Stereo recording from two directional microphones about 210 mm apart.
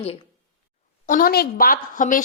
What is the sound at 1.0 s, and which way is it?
A woman's voice, 40° left (ahead or behind).